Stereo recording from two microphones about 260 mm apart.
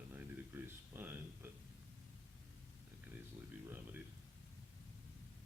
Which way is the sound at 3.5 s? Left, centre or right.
Centre.